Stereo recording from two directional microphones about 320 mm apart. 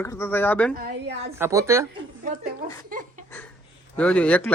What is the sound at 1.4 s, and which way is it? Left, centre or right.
Speech, centre.